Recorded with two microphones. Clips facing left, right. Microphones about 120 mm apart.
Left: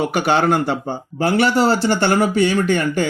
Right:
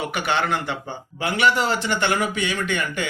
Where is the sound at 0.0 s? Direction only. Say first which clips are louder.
Left 7 dB; 40° left (ahead or behind).